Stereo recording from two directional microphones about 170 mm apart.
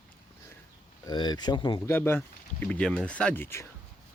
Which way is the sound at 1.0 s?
25° left (ahead or behind).